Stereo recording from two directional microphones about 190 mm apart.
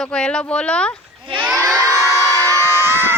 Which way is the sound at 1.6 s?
15° right (ahead or behind).